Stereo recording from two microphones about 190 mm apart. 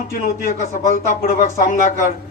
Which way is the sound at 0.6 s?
40° left (ahead or behind).